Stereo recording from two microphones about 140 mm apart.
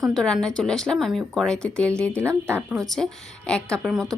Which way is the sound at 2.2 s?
20° right (ahead or behind).